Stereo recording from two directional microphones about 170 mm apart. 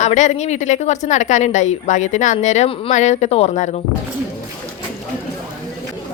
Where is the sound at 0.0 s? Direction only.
45° left (ahead or behind).